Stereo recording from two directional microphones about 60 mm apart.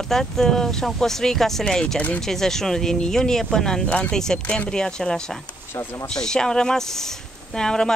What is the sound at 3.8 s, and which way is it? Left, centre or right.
Speech, left.